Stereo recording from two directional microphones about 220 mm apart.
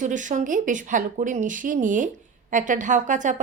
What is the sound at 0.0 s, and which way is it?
A woman's voice, 35° right (ahead or behind).